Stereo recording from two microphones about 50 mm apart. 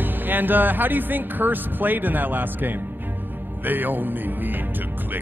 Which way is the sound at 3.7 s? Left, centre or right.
Right.